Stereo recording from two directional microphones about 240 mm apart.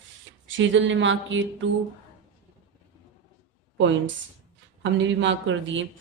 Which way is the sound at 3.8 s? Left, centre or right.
Right.